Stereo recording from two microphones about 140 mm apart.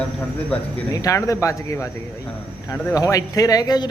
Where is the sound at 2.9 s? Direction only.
25° left (ahead or behind).